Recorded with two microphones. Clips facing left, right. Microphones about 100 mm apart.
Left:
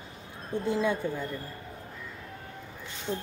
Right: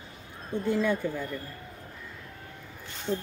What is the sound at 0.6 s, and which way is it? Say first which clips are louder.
Speech: right 1 dB; 20° left (ahead or behind).